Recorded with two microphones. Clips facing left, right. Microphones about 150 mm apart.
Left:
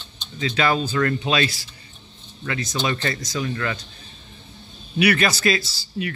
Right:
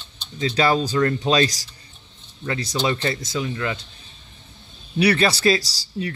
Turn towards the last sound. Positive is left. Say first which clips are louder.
# even
turn(degrees=-35)  # may be behind; listen again after turning